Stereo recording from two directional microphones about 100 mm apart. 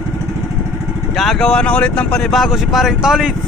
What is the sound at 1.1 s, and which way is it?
Speech, 5° left (ahead or behind).